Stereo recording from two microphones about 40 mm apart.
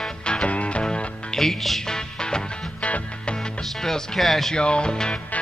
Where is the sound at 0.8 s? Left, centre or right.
Centre.